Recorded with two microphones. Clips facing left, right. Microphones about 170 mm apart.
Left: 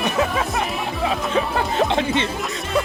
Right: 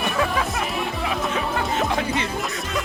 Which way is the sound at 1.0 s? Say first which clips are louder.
Left 6 dB; 30° left (ahead or behind).